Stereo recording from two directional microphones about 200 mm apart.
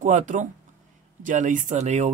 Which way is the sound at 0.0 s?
40° right (ahead or behind).